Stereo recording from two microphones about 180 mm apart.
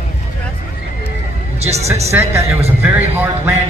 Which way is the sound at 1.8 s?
15° right (ahead or behind).